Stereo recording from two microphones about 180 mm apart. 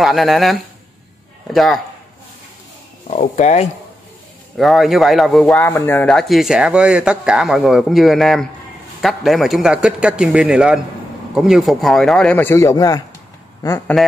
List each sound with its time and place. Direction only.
0.0 s speech: centre (ahead or behind)
3.1 s speech: 40° left (ahead or behind)
4.6 s speech: centre (ahead or behind)
5.7 s speech: 15° left (ahead or behind)